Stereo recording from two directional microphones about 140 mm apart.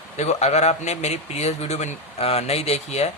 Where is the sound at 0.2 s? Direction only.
50° left (ahead or behind).